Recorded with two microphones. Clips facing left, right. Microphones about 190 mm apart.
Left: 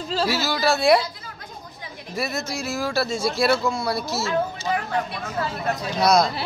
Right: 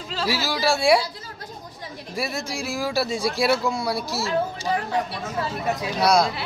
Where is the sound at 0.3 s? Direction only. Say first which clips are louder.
Right 2 dB; 10° right (ahead or behind).